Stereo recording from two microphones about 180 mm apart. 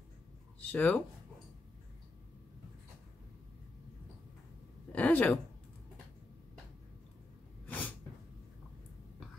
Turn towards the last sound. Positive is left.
turn(degrees=10)  # may be behind; listen again after turning